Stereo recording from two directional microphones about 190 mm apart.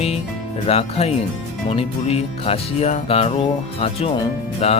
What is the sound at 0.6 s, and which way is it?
Speech, 30° left (ahead or behind).